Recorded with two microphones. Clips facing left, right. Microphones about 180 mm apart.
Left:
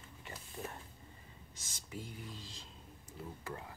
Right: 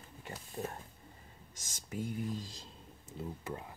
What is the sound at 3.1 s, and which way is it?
Speech, 20° right (ahead or behind).